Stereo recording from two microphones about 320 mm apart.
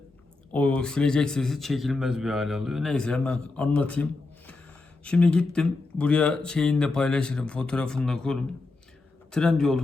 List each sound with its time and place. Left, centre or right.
0.5 s a man's voice: centre
5.0 s a man's voice: centre